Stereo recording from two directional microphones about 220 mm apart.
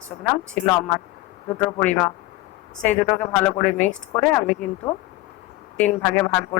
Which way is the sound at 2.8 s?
5° left (ahead or behind).